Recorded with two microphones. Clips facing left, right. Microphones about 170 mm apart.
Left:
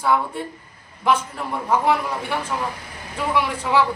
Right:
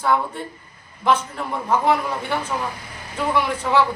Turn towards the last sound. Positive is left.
turn(degrees=5)  # may be behind; listen again after turning